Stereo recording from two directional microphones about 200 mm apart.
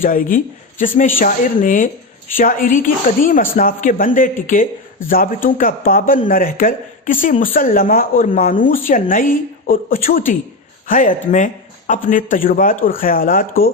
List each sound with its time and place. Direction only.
0.0 s a man's voice: 45° left (ahead or behind)